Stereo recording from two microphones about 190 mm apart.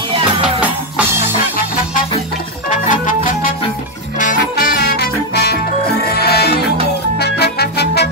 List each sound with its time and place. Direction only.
2.7 s music: 45° left (ahead or behind); by 8.1 s 60° left (ahead or behind)